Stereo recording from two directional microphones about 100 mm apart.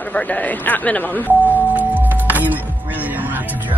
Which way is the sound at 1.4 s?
15° right (ahead or behind).